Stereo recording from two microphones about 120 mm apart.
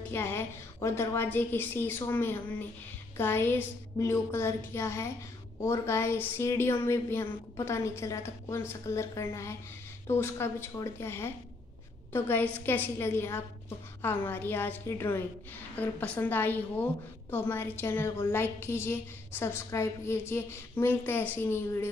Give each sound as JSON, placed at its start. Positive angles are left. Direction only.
{"t": 0.1, "sound": "a woman's voice", "side_deg": 20}